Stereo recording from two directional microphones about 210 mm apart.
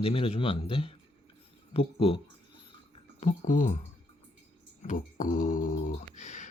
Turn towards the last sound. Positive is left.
turn(degrees=35)  # may be behind; listen again after turning